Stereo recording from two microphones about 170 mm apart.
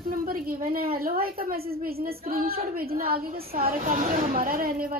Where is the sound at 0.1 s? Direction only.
55° right (ahead or behind).